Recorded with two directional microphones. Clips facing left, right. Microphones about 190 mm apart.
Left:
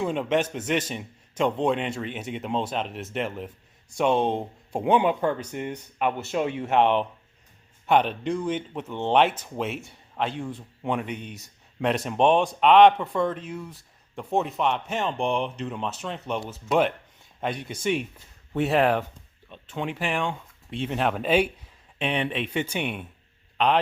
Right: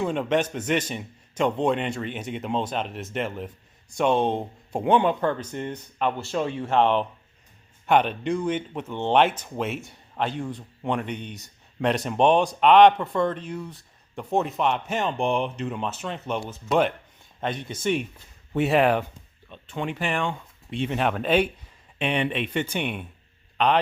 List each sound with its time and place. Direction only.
0.0 s a man's voice: centre (ahead or behind)
6.1 s speech: 20° left (ahead or behind)
6.7 s a man's voice: 5° left (ahead or behind)